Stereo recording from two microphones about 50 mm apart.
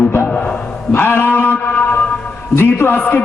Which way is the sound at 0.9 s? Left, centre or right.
Left.